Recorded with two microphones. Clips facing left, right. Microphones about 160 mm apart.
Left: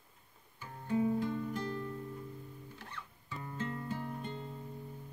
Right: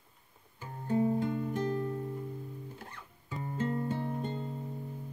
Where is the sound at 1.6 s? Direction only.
40° right (ahead or behind).